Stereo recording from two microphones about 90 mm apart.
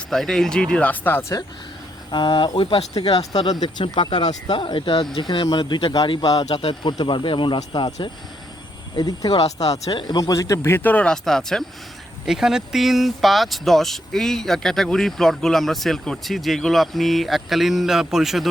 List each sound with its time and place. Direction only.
0.1 s speech: 5° left (ahead or behind)
2.0 s speech: 60° left (ahead or behind)
3.1 s speech: 50° left (ahead or behind)
3.9 s speech: 70° left (ahead or behind); by 6.4 s 45° left (ahead or behind)
6.5 s speech: 75° left (ahead or behind)
9.0 s speech: 50° left (ahead or behind)
9.6 s speech: 40° left (ahead or behind)
9.9 s speech: 65° left (ahead or behind)
10.2 s speech: 40° left (ahead or behind); by 18.4 s 5° right (ahead or behind)